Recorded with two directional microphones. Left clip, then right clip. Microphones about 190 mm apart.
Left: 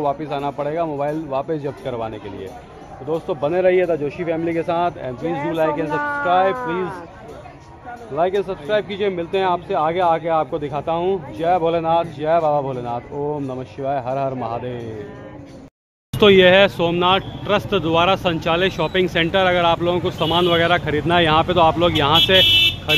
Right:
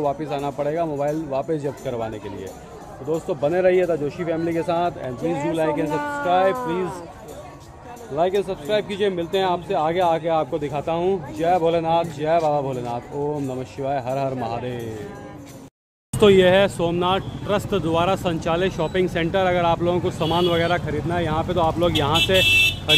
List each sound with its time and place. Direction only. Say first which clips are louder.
0.0 s speech: left 2 dB; 10° right (ahead or behind)
5.9 s speech: left 4 dB; 30° right (ahead or behind)
6.2 s speech: left 1 dB; 10° right (ahead or behind)
8.2 s speech: left 1 dB; 10° right (ahead or behind)
16.1 s speech: left 3 dB; 5° right (ahead or behind)
20.8 s speech: left 8 dB; 10° left (ahead or behind)